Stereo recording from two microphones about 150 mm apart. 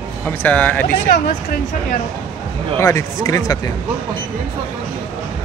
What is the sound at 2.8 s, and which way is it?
Speech, 20° left (ahead or behind).